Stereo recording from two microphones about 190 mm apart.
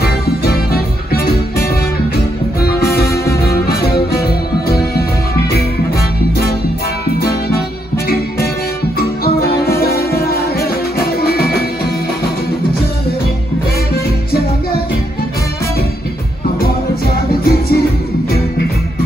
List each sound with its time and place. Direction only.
0.0 s music: 55° left (ahead or behind)
3.1 s music: 15° left (ahead or behind)
3.4 s music: 55° left (ahead or behind)
8.9 s music: 55° left (ahead or behind)
16.5 s music: 55° left (ahead or behind)